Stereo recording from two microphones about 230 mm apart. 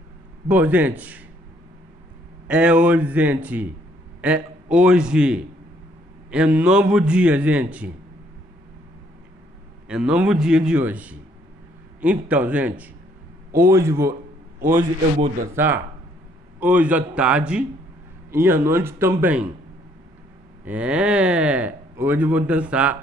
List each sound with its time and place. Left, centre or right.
0.5 s a man's voice: centre
2.4 s a man's voice: centre
9.8 s a man's voice: centre
14.6 s a man's voice: right
15.5 s a man's voice: centre
20.6 s speech: centre